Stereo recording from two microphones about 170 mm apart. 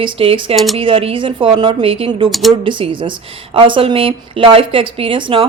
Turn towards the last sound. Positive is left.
turn(degrees=-30)  # may be behind; listen again after turning